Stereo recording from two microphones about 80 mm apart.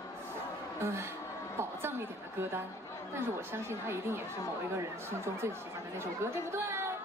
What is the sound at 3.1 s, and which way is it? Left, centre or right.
Speech, right.